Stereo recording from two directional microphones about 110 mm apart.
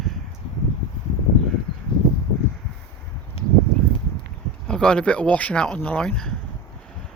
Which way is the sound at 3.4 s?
60° left (ahead or behind).